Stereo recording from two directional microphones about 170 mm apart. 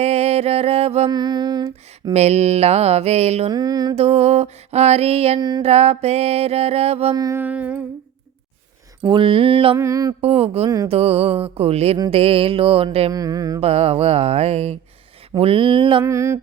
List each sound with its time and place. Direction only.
0.0 s music: 35° right (ahead or behind)
1.1 s a sound: 25° right (ahead or behind)
2.1 s music: 40° right (ahead or behind)
3.5 s mantra: 25° right (ahead or behind)
3.9 s music: 40° right (ahead or behind)
5.4 s mantra: 25° right (ahead or behind)
5.6 s music: 35° right (ahead or behind)
7.1 s mantra: 20° right (ahead or behind)
9.0 s music: 30° right (ahead or behind)
9.7 s mantra: 20° right (ahead or behind)
10.2 s music: 35° right (ahead or behind)
13.1 s mantra: 20° right (ahead or behind)
13.6 s music: 35° right (ahead or behind)
16.0 s mantra: 15° right (ahead or behind)